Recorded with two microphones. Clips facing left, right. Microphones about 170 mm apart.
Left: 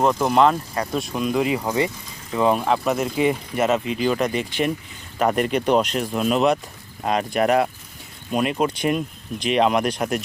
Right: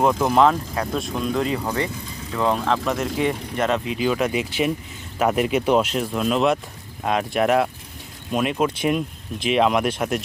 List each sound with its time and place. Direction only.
0.2 s speech: centre (ahead or behind)